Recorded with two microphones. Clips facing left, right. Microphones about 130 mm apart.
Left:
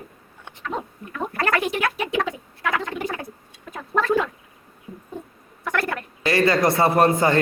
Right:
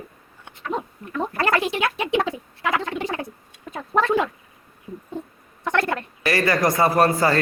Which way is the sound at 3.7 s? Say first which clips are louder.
Right 1 dB; 25° right (ahead or behind).